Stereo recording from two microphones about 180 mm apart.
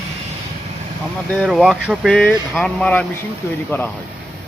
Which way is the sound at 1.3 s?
Centre (ahead or behind).